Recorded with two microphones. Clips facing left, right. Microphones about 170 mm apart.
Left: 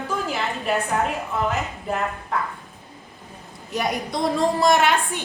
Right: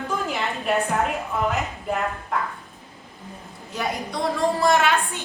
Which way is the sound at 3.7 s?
20° left (ahead or behind).